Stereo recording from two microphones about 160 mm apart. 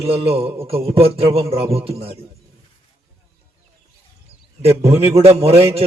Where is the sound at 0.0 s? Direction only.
35° right (ahead or behind).